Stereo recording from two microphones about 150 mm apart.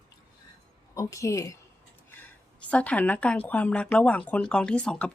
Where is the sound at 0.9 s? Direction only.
20° left (ahead or behind).